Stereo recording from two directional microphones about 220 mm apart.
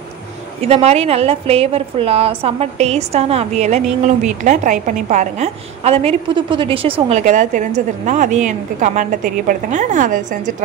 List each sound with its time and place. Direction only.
0.6 s a woman's voice: 30° right (ahead or behind)